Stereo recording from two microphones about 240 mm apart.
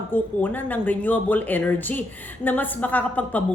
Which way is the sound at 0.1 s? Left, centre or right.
Centre.